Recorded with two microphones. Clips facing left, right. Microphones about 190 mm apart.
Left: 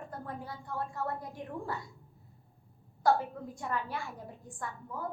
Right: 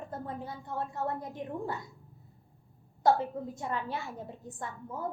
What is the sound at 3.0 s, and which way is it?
A woman's voice, 25° right (ahead or behind).